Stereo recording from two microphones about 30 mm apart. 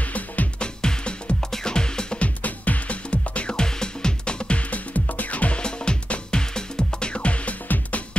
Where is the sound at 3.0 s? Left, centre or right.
Left.